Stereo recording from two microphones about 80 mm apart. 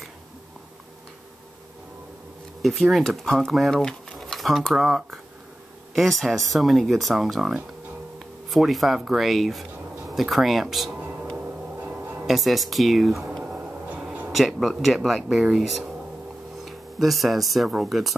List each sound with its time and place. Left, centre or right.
2.6 s speech: centre
11.0 s music: centre
12.3 s speech: centre